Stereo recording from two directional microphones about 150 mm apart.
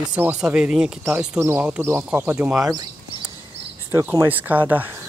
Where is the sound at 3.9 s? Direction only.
15° right (ahead or behind).